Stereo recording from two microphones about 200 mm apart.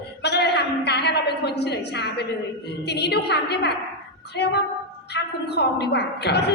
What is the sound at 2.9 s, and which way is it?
A woman's voice, 55° left (ahead or behind).